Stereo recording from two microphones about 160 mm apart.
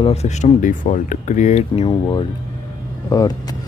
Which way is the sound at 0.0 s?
40° left (ahead or behind).